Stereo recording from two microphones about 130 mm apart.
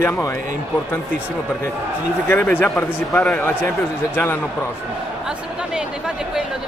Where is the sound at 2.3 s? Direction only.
15° left (ahead or behind).